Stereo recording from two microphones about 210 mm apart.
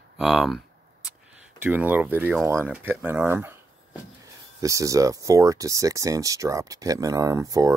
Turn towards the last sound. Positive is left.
turn(degrees=-15)  # may be behind; listen again after turning